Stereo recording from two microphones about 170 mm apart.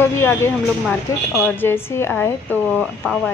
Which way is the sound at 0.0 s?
15° left (ahead or behind).